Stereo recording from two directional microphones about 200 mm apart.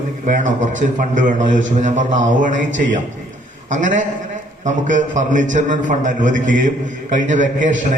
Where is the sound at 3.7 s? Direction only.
40° right (ahead or behind).